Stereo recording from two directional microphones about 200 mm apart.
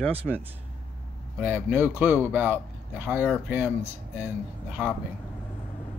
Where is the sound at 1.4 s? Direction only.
10° right (ahead or behind).